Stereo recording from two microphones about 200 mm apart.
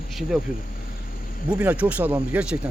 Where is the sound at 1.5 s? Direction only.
5° right (ahead or behind).